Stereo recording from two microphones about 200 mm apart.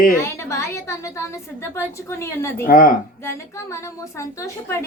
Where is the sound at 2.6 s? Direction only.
45° left (ahead or behind).